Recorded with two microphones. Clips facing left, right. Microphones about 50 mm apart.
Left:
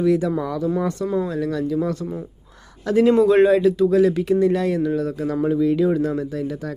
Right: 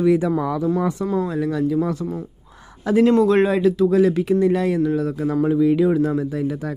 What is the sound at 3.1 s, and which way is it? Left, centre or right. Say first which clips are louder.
Speech: left 5 dB; centre.